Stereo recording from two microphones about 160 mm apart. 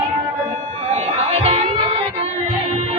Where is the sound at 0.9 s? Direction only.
45° right (ahead or behind).